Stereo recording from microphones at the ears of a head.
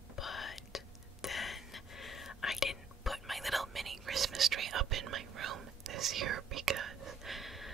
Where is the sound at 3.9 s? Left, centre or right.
Right.